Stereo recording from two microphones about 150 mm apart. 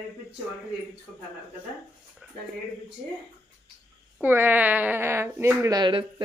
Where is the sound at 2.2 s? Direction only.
5° right (ahead or behind).